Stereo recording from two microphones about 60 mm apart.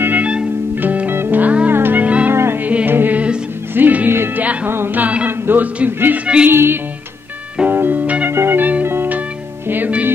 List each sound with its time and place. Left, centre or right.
0.2 s music: centre
0.7 s music: right
1.4 s music: right
1.7 s music: right
2.3 s music: right
2.6 s music: right
6.1 s music: right
6.5 s music: right
8.3 s music: right
8.5 s music: right
8.8 s music: right
9.7 s music: right